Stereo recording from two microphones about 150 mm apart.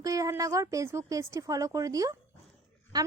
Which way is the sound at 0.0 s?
25° right (ahead or behind).